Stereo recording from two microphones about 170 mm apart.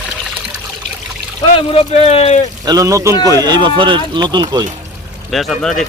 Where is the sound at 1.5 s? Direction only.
30° left (ahead or behind).